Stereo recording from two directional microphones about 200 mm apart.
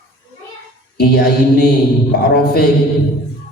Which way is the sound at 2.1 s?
50° left (ahead or behind).